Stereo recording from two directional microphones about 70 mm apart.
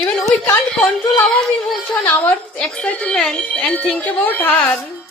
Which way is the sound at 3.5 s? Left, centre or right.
Left.